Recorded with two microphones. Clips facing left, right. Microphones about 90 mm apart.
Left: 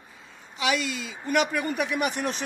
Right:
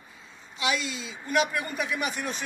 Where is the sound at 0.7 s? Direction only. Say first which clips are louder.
Left 3 dB; 55° left (ahead or behind).